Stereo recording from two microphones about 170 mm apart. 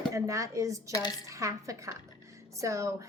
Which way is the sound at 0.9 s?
20° left (ahead or behind).